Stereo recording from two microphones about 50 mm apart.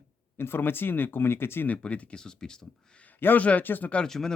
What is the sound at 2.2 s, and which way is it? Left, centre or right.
Speech, centre.